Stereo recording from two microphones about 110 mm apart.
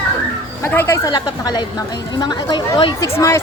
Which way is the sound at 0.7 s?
25° left (ahead or behind).